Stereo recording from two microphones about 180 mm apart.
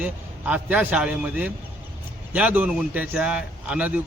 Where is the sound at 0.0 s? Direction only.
5° right (ahead or behind).